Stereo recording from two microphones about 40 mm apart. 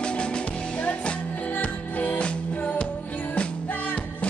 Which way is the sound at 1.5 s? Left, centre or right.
Left.